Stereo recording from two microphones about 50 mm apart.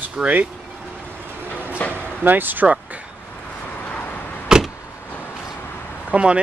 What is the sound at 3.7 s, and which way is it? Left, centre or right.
Vehicle, left.